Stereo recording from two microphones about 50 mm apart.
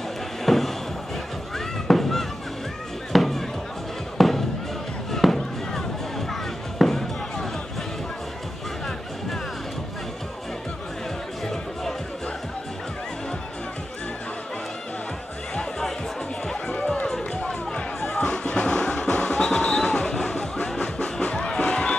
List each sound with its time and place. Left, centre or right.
0.5 s a sound: centre
1.9 s music: centre
3.1 s chop: centre
4.2 s music: centre
5.1 s fireworks: centre
6.8 s music: centre
16.6 s run: left
18.2 s music: centre
20.8 s music: left